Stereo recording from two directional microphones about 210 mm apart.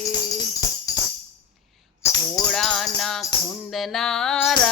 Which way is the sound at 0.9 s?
15° left (ahead or behind).